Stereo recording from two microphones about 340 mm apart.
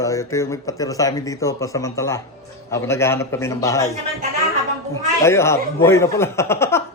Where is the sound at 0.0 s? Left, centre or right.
Centre.